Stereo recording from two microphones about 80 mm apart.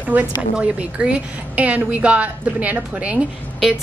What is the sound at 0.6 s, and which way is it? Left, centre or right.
A woman's voice, centre.